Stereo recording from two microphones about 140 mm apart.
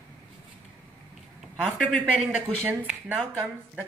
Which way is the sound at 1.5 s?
10° right (ahead or behind).